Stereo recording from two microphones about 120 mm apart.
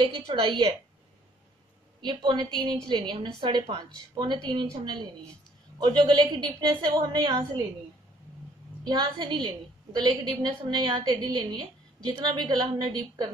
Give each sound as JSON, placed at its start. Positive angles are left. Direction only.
{"t": 0.0, "sound": "a woman's voice", "side_deg": -45}
{"t": 2.0, "sound": "a woman's voice", "side_deg": -40}
{"t": 5.8, "sound": "a woman's voice", "side_deg": -40}
{"t": 8.8, "sound": "a woman's voice", "side_deg": -35}